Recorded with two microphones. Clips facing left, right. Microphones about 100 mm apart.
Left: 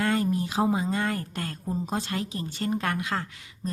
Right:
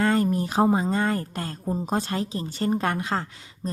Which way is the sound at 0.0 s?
40° right (ahead or behind).